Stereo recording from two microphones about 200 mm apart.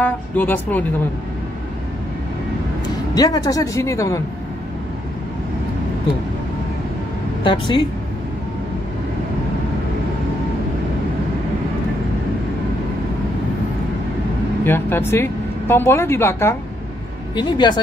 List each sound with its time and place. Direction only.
0.0 s speech: 10° left (ahead or behind)
3.2 s speech: 20° left (ahead or behind)
7.4 s speech: 25° left (ahead or behind)
14.6 s speech: 10° left (ahead or behind)